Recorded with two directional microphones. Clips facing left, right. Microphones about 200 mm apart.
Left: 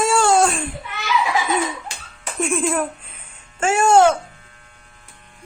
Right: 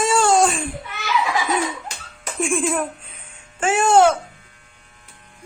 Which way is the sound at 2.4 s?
Centre (ahead or behind).